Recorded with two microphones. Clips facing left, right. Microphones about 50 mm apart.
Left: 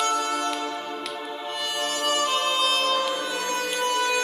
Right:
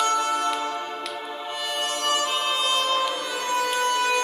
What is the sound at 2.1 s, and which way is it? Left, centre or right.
Music, centre.